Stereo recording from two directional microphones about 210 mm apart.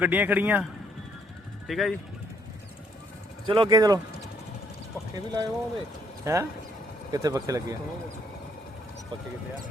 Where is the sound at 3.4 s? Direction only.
25° right (ahead or behind).